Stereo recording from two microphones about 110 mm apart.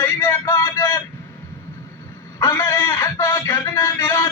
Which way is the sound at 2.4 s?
25° left (ahead or behind).